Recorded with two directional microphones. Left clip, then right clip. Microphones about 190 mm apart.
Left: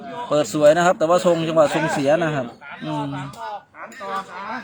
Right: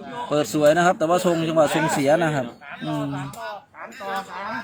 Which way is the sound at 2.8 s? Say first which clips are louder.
Left 1 dB; 35° left (ahead or behind).